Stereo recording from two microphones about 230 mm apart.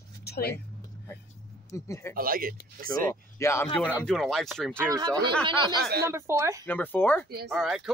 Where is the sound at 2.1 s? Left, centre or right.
Right.